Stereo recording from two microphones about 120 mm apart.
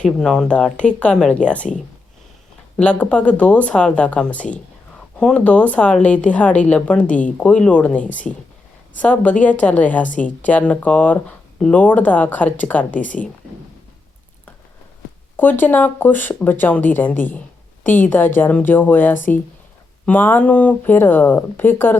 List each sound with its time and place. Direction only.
0.0 s a woman's voice: 5° left (ahead or behind)
2.7 s a woman's voice: 10° left (ahead or behind)
15.4 s a woman's voice: 15° left (ahead or behind)